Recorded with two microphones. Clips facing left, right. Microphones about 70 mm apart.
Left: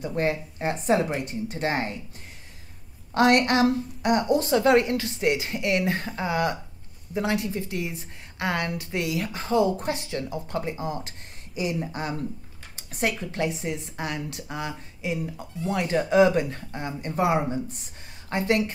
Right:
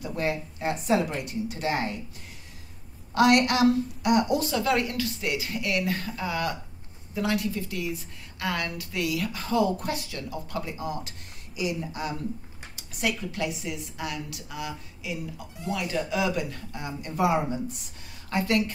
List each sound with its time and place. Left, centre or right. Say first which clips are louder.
0.0 s a woman's voice: left 3 dB; left
3.2 s a woman's voice: left 1 dB; left
18.3 s a woman's voice: left 1 dB; left